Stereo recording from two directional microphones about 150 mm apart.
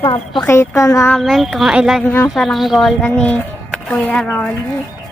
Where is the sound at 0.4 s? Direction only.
20° left (ahead or behind).